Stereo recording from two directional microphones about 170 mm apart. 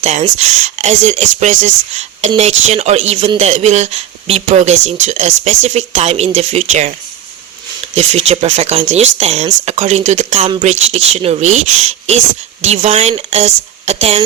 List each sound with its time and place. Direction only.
0.0 s speech: 40° right (ahead or behind)
7.9 s speech: 40° right (ahead or behind)